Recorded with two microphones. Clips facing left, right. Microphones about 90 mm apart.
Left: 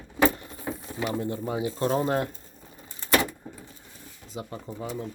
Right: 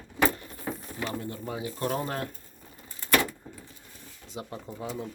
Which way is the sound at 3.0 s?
25° left (ahead or behind).